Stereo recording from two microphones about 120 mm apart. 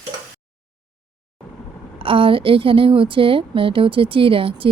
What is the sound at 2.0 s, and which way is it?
A woman's voice, 45° right (ahead or behind).